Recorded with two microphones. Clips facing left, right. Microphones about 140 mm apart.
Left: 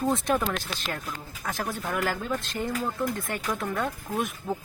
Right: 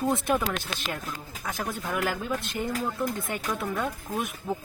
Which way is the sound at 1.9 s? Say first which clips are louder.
Even; 5° right (ahead or behind).